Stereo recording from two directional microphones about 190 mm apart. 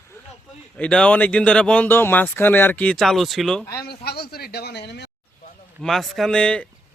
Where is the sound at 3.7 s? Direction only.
55° left (ahead or behind).